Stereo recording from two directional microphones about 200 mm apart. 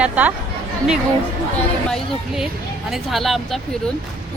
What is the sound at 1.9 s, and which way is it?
A woman's voice, centre (ahead or behind).